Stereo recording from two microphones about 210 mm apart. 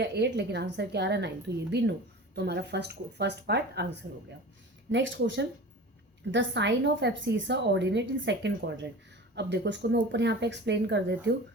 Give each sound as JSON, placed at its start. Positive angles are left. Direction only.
{"t": 0.0, "sound": "a woman's voice", "side_deg": -55}